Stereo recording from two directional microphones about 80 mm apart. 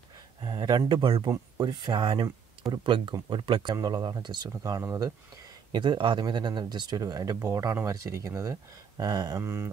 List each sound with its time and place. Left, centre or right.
0.4 s speech: right
1.6 s speech: right
3.7 s speech: right
4.8 s mantra: right
5.7 s speech: right
9.4 s mantra: right